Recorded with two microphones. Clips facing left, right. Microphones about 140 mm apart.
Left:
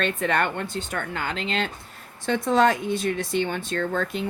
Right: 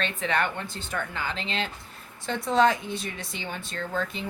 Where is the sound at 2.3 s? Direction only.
65° left (ahead or behind).